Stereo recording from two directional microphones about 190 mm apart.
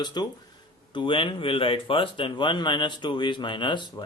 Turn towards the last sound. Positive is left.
turn(degrees=25)  # may be behind; listen again after turning